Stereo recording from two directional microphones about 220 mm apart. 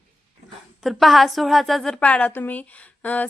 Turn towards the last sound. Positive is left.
turn(degrees=5)  # may be behind; listen again after turning